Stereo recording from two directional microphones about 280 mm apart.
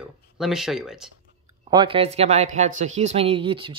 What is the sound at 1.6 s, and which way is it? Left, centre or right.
Speech, centre.